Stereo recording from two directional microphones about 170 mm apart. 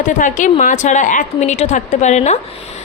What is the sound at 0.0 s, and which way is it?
A woman's voice, 50° left (ahead or behind).